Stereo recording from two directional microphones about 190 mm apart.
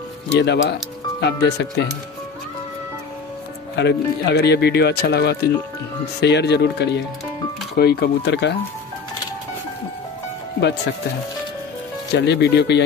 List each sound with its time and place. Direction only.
0.3 s speech: 65° left (ahead or behind)
3.7 s speech: 60° left (ahead or behind)
12.2 s speech: 60° left (ahead or behind)